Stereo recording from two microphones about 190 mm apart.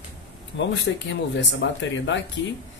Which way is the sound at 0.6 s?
70° left (ahead or behind).